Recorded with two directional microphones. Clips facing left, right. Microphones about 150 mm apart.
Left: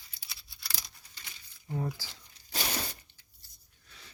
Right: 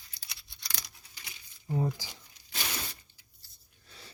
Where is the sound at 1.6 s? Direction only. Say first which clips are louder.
Right 4 dB; 20° right (ahead or behind).